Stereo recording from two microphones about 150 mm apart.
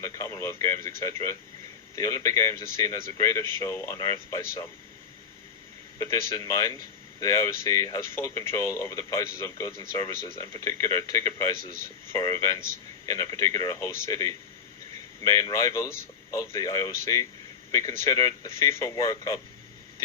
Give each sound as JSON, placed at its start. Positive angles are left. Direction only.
{"t": 0.0, "sound": "speech", "side_deg": 20}
{"t": 6.0, "sound": "speech", "side_deg": 20}